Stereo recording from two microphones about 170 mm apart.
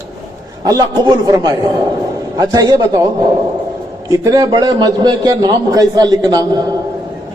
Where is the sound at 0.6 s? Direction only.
20° right (ahead or behind).